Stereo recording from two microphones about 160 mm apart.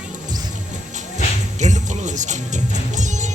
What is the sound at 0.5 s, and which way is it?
Music, 50° right (ahead or behind).